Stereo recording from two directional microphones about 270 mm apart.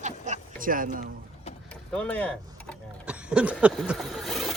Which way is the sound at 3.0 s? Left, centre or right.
Centre.